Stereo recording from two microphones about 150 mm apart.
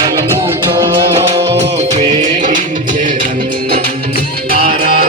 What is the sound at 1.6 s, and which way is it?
Music, 50° right (ahead or behind).